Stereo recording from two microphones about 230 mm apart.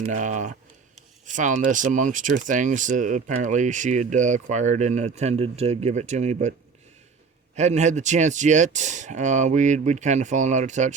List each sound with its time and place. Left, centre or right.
0.0 s speech: right
7.5 s speech: right